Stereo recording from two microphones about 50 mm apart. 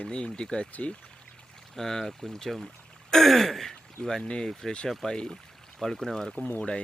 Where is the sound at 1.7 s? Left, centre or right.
Centre.